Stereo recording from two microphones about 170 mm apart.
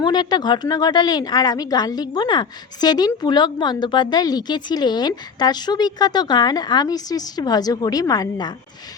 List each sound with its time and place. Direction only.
0.0 s speech: 25° left (ahead or behind)